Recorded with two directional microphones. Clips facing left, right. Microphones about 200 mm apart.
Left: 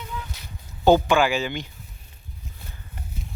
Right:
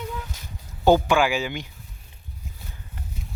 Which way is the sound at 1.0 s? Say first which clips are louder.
Left 1 dB; 10° right (ahead or behind).